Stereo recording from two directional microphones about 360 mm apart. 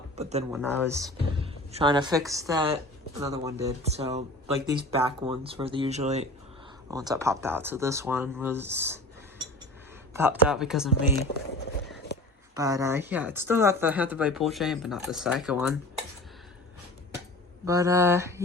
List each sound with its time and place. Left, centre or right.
0.2 s speech: centre
0.5 s speech: centre
10.2 s speech: centre
12.5 s speech: centre
17.7 s speech: centre